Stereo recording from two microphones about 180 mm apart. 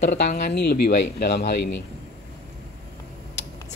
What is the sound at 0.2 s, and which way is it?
Speech, 55° left (ahead or behind).